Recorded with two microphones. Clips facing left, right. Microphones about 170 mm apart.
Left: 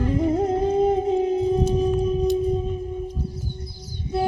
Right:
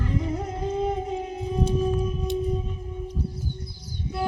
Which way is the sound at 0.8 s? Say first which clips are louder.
Left 7 dB; 35° left (ahead or behind).